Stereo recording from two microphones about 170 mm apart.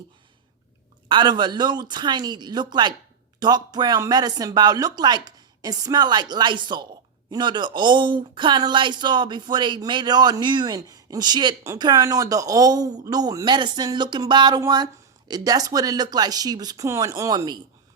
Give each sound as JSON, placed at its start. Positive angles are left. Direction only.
{"t": 1.0, "sound": "speech", "side_deg": -25}